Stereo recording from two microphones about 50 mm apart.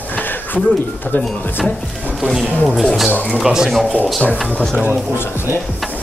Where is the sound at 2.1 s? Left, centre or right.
Centre.